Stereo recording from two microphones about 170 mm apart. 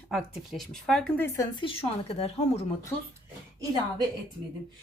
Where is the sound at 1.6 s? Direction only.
30° left (ahead or behind).